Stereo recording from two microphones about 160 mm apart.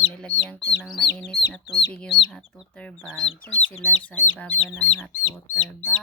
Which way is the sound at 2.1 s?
30° left (ahead or behind).